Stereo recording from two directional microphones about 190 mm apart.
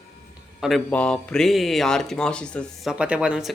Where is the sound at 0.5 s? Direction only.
Centre (ahead or behind).